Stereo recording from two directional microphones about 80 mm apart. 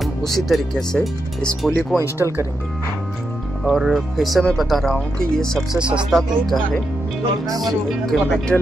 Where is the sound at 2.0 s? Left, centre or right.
Right.